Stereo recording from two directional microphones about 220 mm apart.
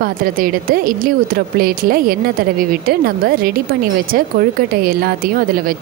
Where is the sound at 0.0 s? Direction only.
40° right (ahead or behind).